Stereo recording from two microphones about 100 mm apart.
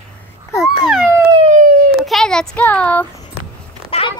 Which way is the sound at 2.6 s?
15° left (ahead or behind).